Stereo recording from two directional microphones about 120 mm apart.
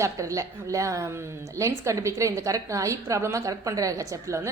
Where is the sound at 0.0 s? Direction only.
25° right (ahead or behind).